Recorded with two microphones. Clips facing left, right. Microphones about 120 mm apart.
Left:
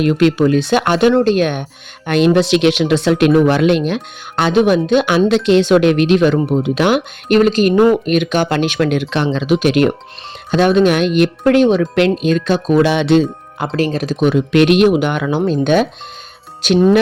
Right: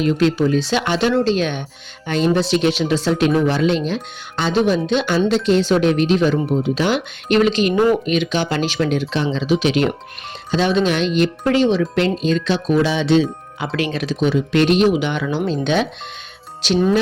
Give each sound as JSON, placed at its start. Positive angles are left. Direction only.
{"t": 0.0, "sound": "speech", "side_deg": 65}
{"t": 2.0, "sound": "speech", "side_deg": 70}
{"t": 5.3, "sound": "speech", "side_deg": 75}
{"t": 12.8, "sound": "speech", "side_deg": 65}
{"t": 13.7, "sound": "speech", "side_deg": 40}